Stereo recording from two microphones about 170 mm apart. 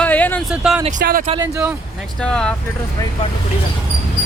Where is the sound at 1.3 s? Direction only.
20° right (ahead or behind).